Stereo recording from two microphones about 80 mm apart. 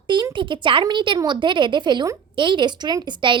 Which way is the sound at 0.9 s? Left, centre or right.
Right.